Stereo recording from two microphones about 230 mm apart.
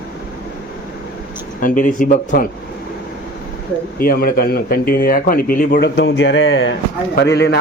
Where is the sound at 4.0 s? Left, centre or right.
Left.